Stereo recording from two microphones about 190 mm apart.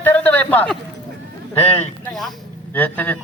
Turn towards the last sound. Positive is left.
turn(degrees=10)  # may be behind; listen again after turning